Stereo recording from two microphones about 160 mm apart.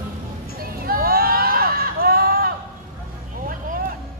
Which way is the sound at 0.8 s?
70° right (ahead or behind).